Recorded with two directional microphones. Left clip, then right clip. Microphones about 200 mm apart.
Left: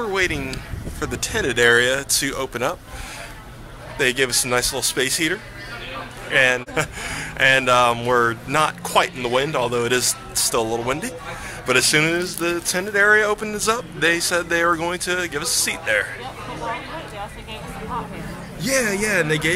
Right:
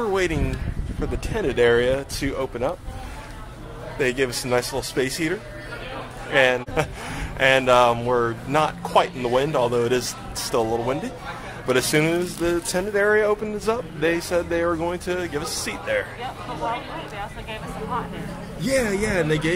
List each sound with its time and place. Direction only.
0.0 s speech: 20° right (ahead or behind)
1.0 s speech: 5° right (ahead or behind)
4.0 s speech: 5° right (ahead or behind)
18.6 s speech: centre (ahead or behind)